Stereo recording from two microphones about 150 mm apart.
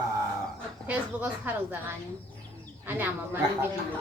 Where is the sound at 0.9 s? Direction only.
10° right (ahead or behind).